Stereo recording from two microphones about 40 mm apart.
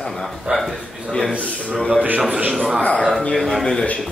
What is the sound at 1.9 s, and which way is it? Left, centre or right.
Speech, right.